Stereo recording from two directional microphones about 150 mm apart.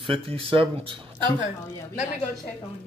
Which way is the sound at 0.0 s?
35° right (ahead or behind).